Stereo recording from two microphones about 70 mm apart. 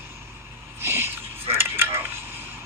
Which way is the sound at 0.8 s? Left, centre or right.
Right.